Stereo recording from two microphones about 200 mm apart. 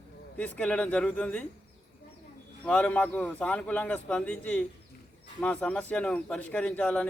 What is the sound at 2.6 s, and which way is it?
A man's voice, 5° left (ahead or behind).